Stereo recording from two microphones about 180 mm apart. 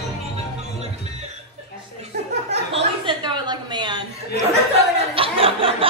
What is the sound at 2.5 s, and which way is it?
Chuckle, 35° right (ahead or behind).